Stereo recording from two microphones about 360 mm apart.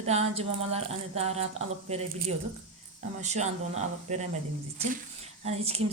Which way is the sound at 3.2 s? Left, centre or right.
Centre.